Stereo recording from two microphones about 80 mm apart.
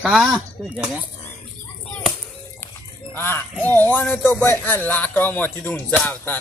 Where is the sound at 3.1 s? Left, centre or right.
Left.